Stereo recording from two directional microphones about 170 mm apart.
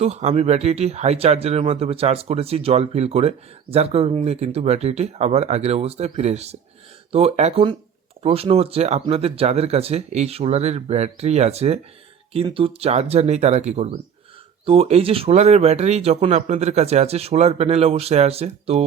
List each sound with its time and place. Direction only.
0.0 s speech: 40° right (ahead or behind)